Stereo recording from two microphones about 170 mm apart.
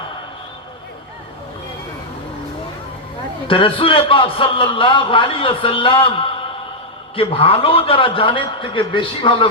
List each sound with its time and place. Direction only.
3.4 s a man's voice: 30° left (ahead or behind)